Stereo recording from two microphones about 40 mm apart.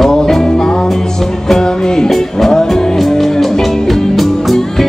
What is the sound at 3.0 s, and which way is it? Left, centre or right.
Music, centre.